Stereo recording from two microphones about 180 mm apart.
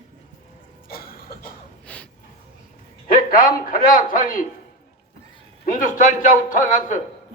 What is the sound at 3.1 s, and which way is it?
A man's voice, 50° left (ahead or behind).